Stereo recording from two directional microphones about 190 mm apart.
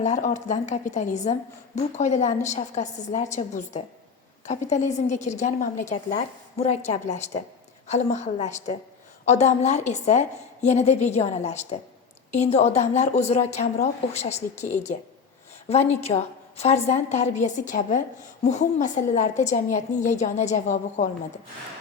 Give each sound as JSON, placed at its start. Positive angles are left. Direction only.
{"t": 0.0, "sound": "a woman's voice", "side_deg": 40}